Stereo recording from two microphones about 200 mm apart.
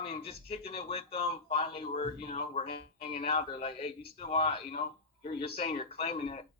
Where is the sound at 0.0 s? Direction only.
30° left (ahead or behind).